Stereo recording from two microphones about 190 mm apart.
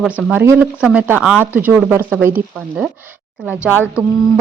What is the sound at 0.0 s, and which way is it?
Speech, 5° right (ahead or behind).